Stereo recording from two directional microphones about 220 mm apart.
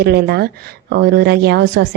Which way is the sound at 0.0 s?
45° right (ahead or behind).